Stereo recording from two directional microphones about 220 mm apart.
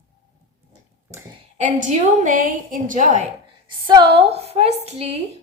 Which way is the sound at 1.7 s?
35° right (ahead or behind).